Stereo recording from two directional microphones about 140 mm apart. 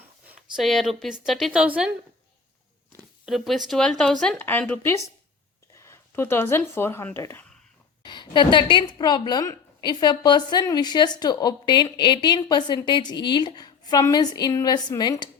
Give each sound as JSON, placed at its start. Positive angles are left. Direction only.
{"t": 0.5, "sound": "a woman's voice", "side_deg": 0}
{"t": 1.6, "sound": "a woman's voice", "side_deg": -10}
{"t": 3.2, "sound": "a woman's voice", "side_deg": 0}
{"t": 8.0, "sound": "a woman's voice", "side_deg": 35}